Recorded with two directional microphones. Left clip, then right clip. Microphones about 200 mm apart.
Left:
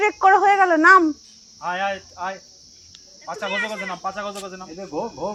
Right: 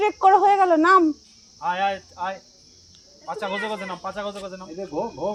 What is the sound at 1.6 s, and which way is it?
Speech, 50° right (ahead or behind).